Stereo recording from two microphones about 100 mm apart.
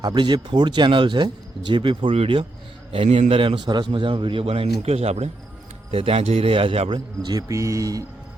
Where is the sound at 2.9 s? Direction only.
80° right.